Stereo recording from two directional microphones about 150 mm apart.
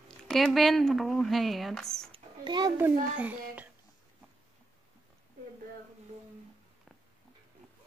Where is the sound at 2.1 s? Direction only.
30° right (ahead or behind).